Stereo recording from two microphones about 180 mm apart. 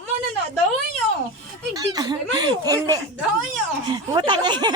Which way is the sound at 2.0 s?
25° right (ahead or behind).